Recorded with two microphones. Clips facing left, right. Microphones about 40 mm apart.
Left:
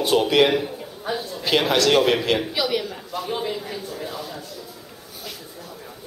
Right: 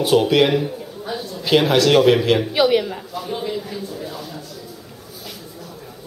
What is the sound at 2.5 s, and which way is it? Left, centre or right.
Speech, right.